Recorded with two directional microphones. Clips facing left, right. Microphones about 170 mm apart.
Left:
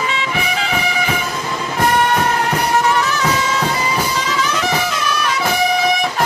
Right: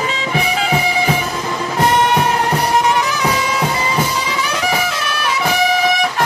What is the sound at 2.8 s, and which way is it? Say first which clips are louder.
Bagpipes: even; 15° right (ahead or behind).